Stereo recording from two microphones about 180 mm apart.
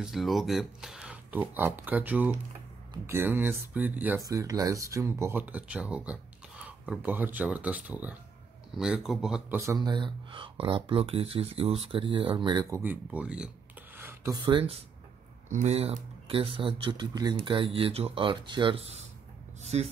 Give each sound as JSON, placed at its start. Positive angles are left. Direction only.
{"t": 0.0, "sound": "speech", "side_deg": 0}
{"t": 9.6, "sound": "speech", "side_deg": -20}
{"t": 13.9, "sound": "a sound", "side_deg": -15}
{"t": 14.4, "sound": "speech", "side_deg": -30}